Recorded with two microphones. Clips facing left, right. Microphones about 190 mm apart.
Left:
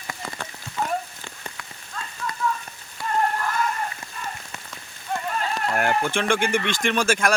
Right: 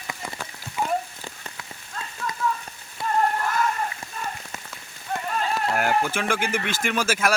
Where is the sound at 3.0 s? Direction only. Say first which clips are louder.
Right 2 dB; 25° right (ahead or behind).